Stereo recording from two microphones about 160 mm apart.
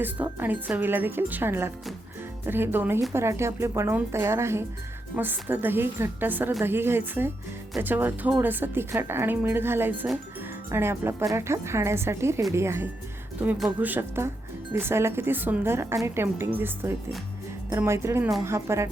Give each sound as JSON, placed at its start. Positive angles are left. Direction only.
{"t": 0.0, "sound": "a woman's voice", "side_deg": -10}